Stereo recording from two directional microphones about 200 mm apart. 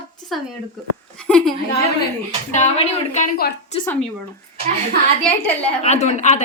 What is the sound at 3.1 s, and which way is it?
Speech, 40° left (ahead or behind).